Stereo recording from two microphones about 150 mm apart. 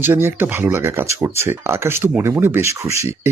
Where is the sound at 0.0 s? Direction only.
15° right (ahead or behind).